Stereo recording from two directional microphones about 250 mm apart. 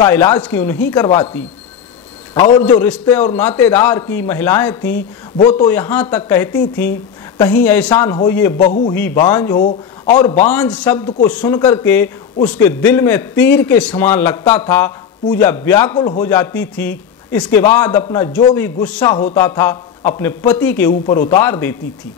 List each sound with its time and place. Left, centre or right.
0.0 s a man's voice: centre
2.6 s a man's voice: centre
8.5 s a man's voice: left
8.9 s a man's voice: centre
9.6 s speech: left
10.4 s a man's voice: centre